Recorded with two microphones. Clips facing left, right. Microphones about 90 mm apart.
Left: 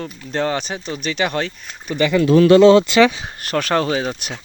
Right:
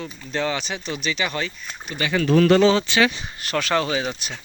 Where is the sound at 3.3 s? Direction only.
45° left (ahead or behind).